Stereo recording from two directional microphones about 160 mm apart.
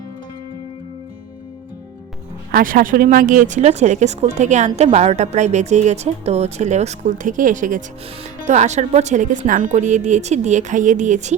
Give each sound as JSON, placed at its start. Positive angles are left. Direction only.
{"t": 2.5, "sound": "a woman's voice", "side_deg": -65}